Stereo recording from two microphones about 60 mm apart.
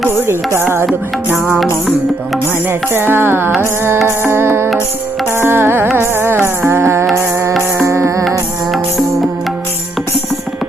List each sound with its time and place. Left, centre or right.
2.6 s music: right
7.9 s music: right